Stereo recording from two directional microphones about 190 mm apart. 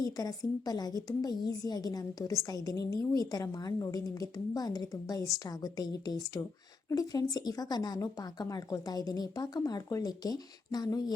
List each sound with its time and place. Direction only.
0.0 s a woman's voice: 20° left (ahead or behind)